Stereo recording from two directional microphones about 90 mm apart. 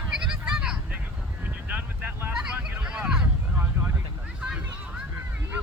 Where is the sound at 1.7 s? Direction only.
20° right (ahead or behind).